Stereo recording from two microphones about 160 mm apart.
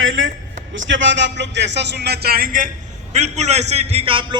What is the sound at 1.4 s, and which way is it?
Speech, 90° right.